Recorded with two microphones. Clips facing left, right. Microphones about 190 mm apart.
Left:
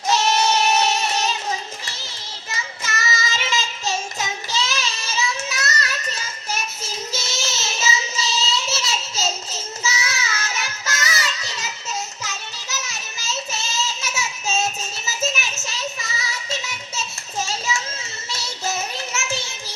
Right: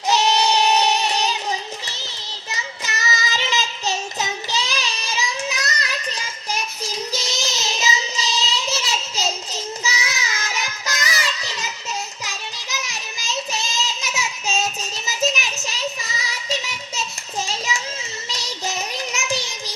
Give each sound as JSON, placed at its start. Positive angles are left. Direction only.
{"t": 0.1, "sound": "child singing", "side_deg": -15}
{"t": 2.5, "sound": "child singing", "side_deg": -20}
{"t": 12.2, "sound": "child singing", "side_deg": -15}
{"t": 17.4, "sound": "a sound", "side_deg": -15}
{"t": 18.3, "sound": "child singing", "side_deg": -15}